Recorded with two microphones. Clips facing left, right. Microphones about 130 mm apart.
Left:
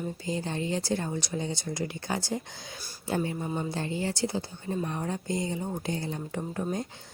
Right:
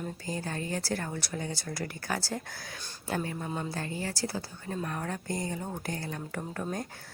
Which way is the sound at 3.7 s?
25° left (ahead or behind).